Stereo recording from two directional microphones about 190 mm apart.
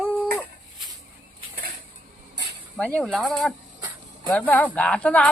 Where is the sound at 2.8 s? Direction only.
5° left (ahead or behind).